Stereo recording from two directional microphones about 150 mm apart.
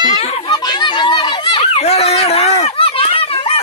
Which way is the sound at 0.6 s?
30° left (ahead or behind).